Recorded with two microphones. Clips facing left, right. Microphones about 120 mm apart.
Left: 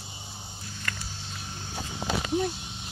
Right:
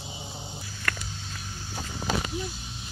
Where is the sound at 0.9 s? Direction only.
60° right (ahead or behind).